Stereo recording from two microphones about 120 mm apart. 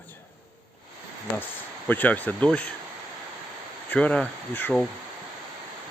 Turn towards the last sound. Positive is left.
turn(degrees=10)  # may be behind; listen again after turning